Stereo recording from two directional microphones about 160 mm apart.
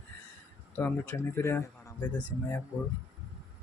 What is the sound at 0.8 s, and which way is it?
Speech, 15° left (ahead or behind).